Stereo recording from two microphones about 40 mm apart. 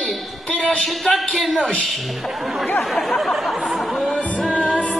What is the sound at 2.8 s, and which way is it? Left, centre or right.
Chatter, centre.